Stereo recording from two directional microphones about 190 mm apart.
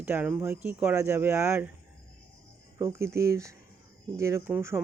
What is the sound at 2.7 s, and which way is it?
Speech, 15° right (ahead or behind).